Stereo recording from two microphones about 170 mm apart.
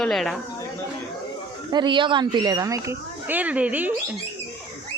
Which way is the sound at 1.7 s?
25° right (ahead or behind).